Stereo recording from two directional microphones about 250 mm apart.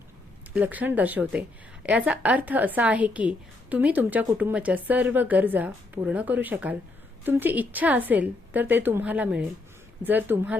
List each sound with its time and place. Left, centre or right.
0.5 s a woman's voice: centre